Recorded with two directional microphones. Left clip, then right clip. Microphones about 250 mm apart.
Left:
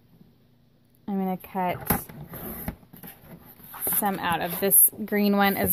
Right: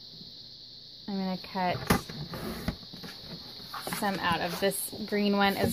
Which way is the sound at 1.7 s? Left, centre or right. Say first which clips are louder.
Right 1 dB; centre.